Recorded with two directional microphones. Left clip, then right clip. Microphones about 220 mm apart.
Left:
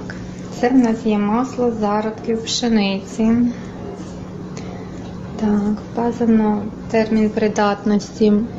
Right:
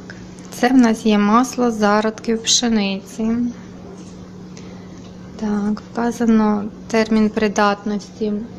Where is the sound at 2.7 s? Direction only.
20° right (ahead or behind).